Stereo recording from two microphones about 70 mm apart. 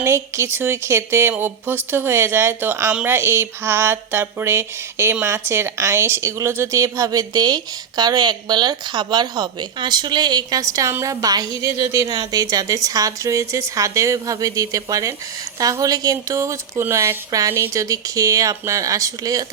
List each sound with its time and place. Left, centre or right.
0.0 s speech: right
6.7 s a woman's voice: right
10.6 s a woman's voice: right
17.5 s speech: right
17.8 s speech: right